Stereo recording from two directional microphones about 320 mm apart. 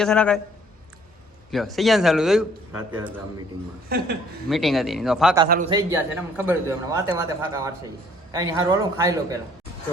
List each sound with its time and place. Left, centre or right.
0.0 s a man's voice: centre
1.5 s a man's voice: centre
3.8 s a woman's voice: right
4.4 s a man's voice: centre
5.5 s a woman's voice: right
5.7 s a man's voice: centre